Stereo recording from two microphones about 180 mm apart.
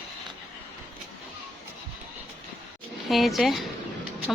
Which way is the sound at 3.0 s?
Centre (ahead or behind).